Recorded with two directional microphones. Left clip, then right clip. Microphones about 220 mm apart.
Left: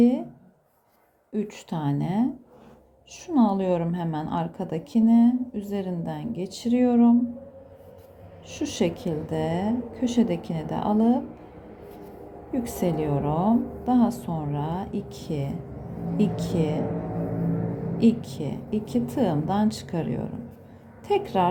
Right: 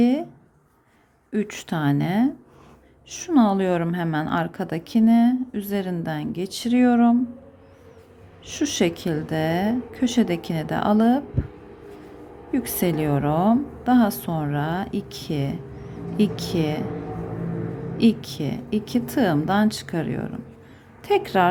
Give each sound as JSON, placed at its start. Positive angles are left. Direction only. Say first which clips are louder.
{"t": 0.0, "sound": "speech", "louder": "right 1 dB", "side_deg": -15}
{"t": 1.3, "sound": "a woman's voice", "louder": "right 4 dB", "side_deg": -20}
{"t": 8.4, "sound": "a woman's voice", "louder": "right 4 dB", "side_deg": -20}
{"t": 12.5, "sound": "a woman's voice", "louder": "right 3 dB", "side_deg": -15}
{"t": 17.9, "sound": "a woman's voice", "louder": "right 2 dB", "side_deg": -15}